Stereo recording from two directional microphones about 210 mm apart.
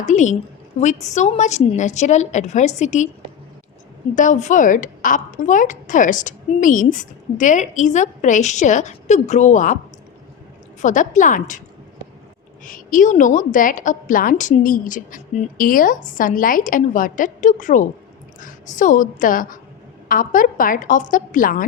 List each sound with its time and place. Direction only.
0.0 s a woman's voice: 35° left (ahead or behind)
4.1 s a woman's voice: 35° left (ahead or behind)
10.8 s a woman's voice: 35° left (ahead or behind)
12.6 s a woman's voice: 40° left (ahead or behind)